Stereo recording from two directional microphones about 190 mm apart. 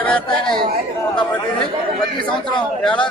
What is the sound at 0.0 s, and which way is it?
Speech, 5° left (ahead or behind).